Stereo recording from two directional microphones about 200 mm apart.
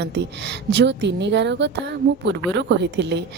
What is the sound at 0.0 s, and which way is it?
A woman's voice, 60° right (ahead or behind).